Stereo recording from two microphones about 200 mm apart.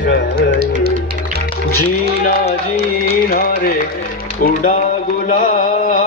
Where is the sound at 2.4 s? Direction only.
30° left (ahead or behind).